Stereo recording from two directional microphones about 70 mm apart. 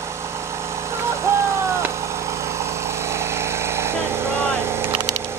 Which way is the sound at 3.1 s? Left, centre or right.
Right.